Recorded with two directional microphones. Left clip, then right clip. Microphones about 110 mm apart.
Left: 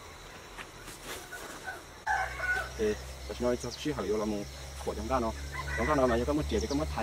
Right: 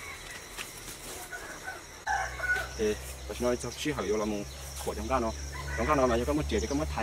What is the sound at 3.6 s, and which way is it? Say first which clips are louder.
Speech: right 2 dB; 10° right (ahead or behind).